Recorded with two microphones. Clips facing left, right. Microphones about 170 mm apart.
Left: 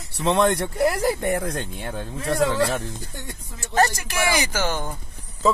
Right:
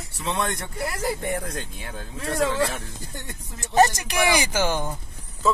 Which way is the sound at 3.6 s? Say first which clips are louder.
Right 2 dB; 20° right (ahead or behind).